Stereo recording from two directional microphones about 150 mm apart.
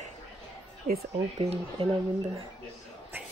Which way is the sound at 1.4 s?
40° right (ahead or behind).